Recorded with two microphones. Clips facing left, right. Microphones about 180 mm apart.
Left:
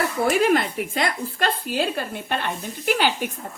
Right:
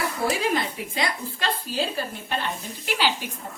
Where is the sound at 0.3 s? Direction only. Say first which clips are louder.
Left 6 dB; 50° left (ahead or behind).